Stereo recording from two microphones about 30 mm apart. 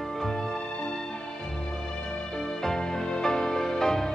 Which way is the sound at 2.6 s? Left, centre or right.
Centre.